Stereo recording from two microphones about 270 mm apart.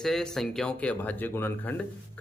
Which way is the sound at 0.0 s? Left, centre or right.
Centre.